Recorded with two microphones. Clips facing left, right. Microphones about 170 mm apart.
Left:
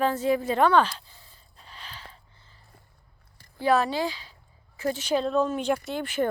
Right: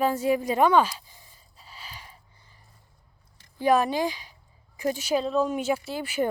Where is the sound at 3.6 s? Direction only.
15° right (ahead or behind).